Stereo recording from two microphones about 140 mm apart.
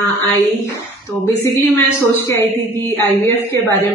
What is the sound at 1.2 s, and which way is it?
A woman's voice, 20° left (ahead or behind).